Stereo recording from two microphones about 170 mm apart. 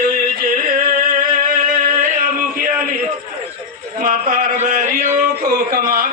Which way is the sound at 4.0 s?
55° right (ahead or behind).